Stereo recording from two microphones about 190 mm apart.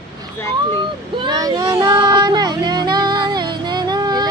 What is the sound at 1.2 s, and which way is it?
Child singing, 20° right (ahead or behind).